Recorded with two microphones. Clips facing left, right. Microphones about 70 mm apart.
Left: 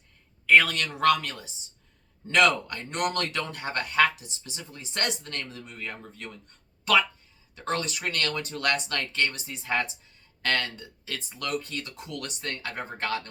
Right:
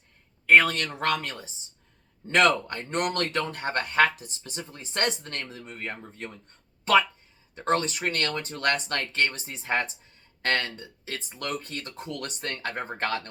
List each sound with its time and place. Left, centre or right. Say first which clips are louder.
0.4 s a man's voice: right 1 dB; right
7.5 s a man's voice: right 4 dB; right